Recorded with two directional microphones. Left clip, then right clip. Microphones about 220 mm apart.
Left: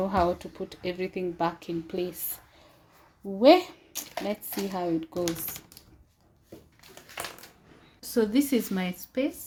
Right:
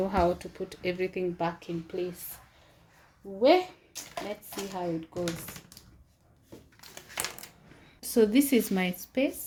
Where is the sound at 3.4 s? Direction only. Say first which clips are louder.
Left 4 dB; 35° left (ahead or behind).